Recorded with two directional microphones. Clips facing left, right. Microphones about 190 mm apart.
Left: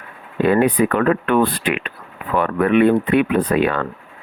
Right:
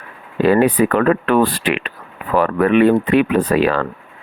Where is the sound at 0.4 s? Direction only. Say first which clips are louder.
Right 2 dB; 90° right.